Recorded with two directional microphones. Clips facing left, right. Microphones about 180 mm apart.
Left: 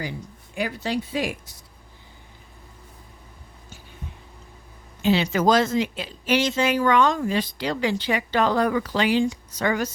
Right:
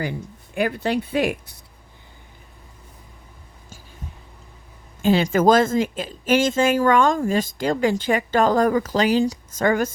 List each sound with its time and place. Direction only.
0.5 s speech: 55° right (ahead or behind)
5.0 s speech: 45° right (ahead or behind)